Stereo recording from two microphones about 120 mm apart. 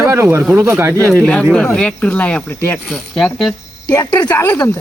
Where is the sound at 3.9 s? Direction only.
15° left (ahead or behind).